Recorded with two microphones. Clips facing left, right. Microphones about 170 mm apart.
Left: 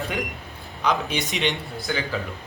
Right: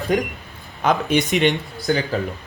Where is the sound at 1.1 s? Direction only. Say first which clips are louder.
Right 9 dB; centre (ahead or behind).